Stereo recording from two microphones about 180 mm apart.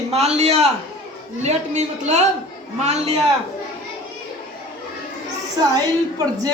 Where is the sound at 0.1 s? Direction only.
35° right (ahead or behind).